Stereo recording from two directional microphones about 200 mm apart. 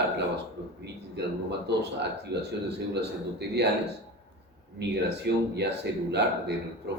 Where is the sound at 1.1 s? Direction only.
55° right (ahead or behind).